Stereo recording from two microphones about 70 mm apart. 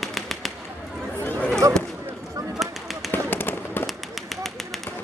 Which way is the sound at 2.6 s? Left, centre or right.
Centre.